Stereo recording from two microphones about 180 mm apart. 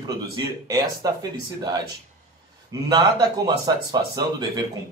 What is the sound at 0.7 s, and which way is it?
Speech, 20° right (ahead or behind).